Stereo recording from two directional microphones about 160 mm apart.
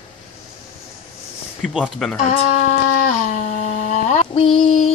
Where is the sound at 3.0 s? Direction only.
45° left (ahead or behind).